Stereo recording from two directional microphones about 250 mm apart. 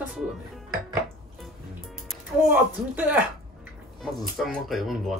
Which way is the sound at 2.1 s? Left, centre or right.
Centre.